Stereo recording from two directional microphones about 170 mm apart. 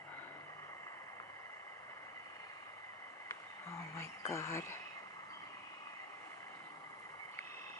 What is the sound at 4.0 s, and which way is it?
Speech, 15° left (ahead or behind).